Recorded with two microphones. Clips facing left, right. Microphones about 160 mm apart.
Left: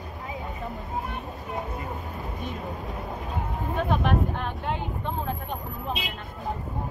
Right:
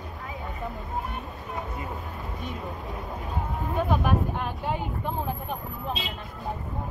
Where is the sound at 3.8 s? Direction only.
10° right (ahead or behind).